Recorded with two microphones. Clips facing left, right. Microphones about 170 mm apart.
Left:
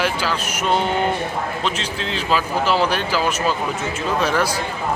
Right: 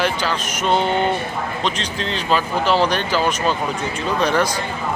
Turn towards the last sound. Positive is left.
turn(degrees=5)  # may be behind; listen again after turning